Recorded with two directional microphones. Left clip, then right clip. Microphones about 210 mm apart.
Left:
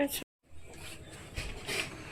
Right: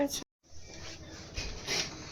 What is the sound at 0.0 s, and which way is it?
Speech, 5° left (ahead or behind).